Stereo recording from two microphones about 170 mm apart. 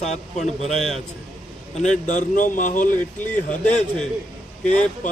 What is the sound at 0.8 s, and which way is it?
Speech, centre (ahead or behind).